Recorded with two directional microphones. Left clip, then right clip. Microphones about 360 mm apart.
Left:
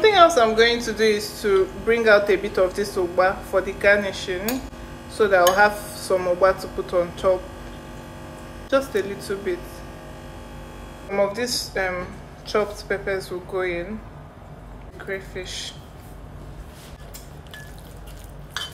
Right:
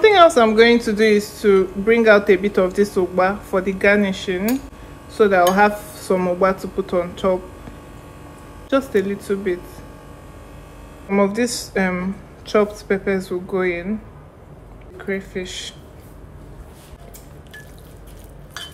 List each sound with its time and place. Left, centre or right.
0.0 s speech: centre
8.6 s speech: centre
11.1 s speech: centre
15.0 s speech: centre